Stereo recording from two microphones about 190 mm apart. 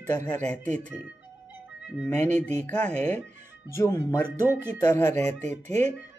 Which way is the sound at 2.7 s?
5° left (ahead or behind).